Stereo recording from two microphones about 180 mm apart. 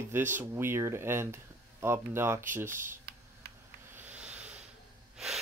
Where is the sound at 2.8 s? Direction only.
60° right (ahead or behind).